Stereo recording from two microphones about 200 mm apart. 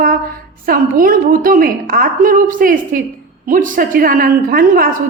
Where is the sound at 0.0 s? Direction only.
45° right (ahead or behind).